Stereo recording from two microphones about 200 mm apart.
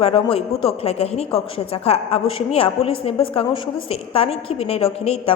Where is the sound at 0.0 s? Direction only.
30° left (ahead or behind).